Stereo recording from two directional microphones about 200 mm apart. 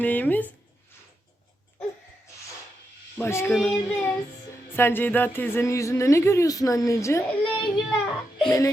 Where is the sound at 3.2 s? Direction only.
10° left (ahead or behind).